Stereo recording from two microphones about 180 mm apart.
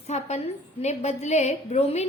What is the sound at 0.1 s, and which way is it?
A woman's voice, 35° left (ahead or behind).